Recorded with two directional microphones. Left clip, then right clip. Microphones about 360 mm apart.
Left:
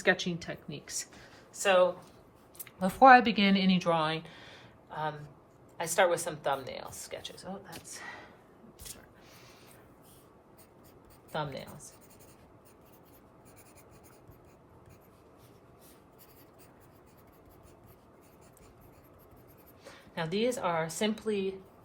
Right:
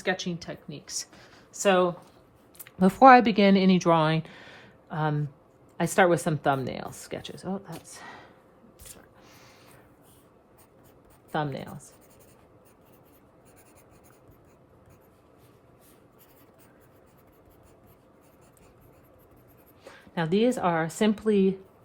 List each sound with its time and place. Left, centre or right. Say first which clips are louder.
0.0 s speech: left 1 dB; centre
1.5 s speech: right 2 dB; centre
11.3 s speech: right 6 dB; right
20.1 s speech: right 6 dB; right